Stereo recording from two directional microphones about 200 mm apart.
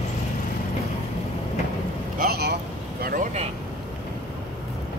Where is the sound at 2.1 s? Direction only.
50° right (ahead or behind).